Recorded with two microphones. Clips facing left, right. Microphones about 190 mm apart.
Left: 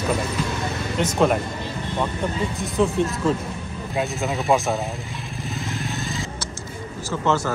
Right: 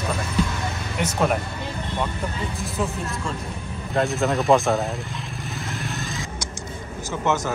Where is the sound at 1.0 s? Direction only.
5° right (ahead or behind).